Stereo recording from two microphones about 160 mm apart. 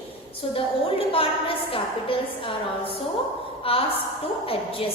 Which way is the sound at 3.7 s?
35° left (ahead or behind).